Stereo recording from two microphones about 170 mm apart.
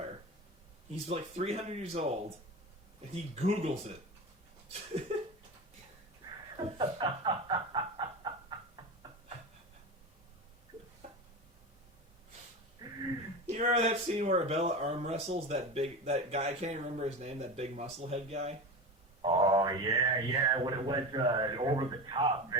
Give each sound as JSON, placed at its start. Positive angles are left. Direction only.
{"t": 1.0, "sound": "speech", "side_deg": -35}
{"t": 3.3, "sound": "speech", "side_deg": -40}
{"t": 5.1, "sound": "a sound", "side_deg": -40}
{"t": 6.6, "sound": "a sound", "side_deg": -30}
{"t": 12.8, "sound": "wheeze", "side_deg": -25}
{"t": 13.5, "sound": "speech", "side_deg": -40}
{"t": 19.2, "sound": "speech", "side_deg": -30}